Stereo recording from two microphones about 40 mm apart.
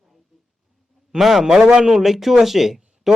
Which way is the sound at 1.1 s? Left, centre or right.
Centre.